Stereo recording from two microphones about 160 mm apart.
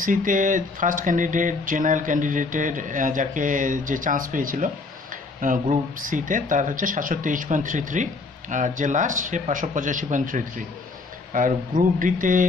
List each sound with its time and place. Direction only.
0.0 s speech: 55° right (ahead or behind)